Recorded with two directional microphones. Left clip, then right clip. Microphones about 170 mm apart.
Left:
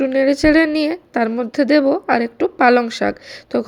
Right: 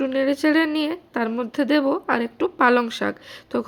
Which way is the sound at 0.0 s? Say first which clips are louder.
Left 6 dB; 20° left (ahead or behind).